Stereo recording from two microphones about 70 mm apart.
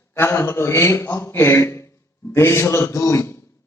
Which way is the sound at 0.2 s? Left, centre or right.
Left.